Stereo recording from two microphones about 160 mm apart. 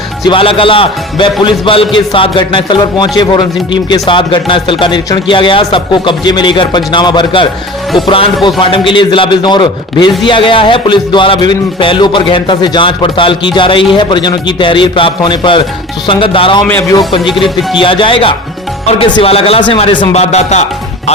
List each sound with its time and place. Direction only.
0.3 s music: 35° left (ahead or behind)
8.4 s a man's voice: 30° left (ahead or behind)
10.2 s music: 30° left (ahead or behind)
16.6 s speech: 15° left (ahead or behind)
17.7 s music: 30° left (ahead or behind)